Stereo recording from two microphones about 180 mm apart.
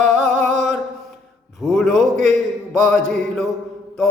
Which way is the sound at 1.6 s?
Centre (ahead or behind).